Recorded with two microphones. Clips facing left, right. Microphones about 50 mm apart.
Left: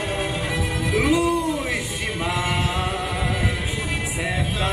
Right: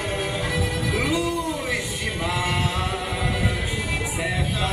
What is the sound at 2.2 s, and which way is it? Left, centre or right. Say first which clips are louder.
A capella: left 1 dB; centre.